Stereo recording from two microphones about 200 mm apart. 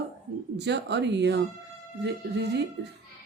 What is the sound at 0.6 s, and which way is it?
Speech, 60° right (ahead or behind).